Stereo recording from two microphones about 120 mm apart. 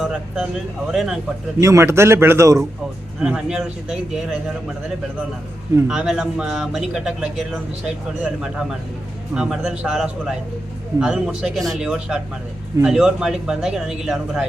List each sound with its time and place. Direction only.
0.0 s a man's voice: 5° right (ahead or behind)
1.6 s a man's voice: 25° right (ahead or behind)
3.2 s a man's voice: 5° right (ahead or behind)
5.9 s a man's voice: 5° right (ahead or behind)